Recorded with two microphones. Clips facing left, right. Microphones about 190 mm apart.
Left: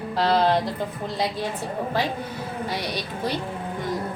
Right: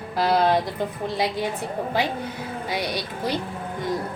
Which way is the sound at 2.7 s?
15° right (ahead or behind).